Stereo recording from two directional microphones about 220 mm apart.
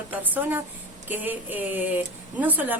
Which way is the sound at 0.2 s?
10° right (ahead or behind).